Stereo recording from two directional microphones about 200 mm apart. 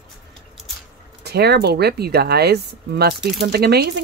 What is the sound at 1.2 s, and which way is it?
Speech, 55° right (ahead or behind).